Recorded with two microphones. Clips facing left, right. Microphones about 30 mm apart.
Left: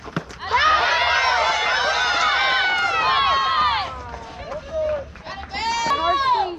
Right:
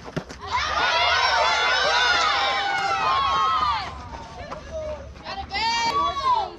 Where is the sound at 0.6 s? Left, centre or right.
Left.